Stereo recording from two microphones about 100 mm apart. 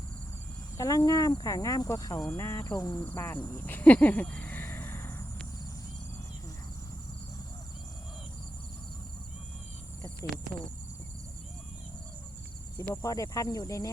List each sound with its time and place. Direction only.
0.8 s speech: 35° left (ahead or behind)
3.1 s cricket: 20° left (ahead or behind)
3.6 s a sound: 20° left (ahead or behind)
12.9 s speech: 35° left (ahead or behind)